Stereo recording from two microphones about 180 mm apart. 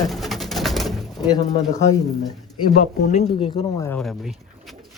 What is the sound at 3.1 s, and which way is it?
Speech, 35° left (ahead or behind).